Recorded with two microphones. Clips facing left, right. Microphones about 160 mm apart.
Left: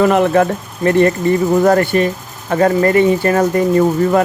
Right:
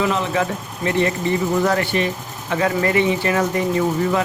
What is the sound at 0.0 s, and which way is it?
Speech, 55° left (ahead or behind).